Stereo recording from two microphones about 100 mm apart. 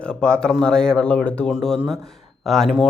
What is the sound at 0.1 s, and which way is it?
Speech, 10° left (ahead or behind).